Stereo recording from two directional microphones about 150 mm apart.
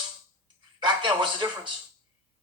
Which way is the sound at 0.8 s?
30° right (ahead or behind).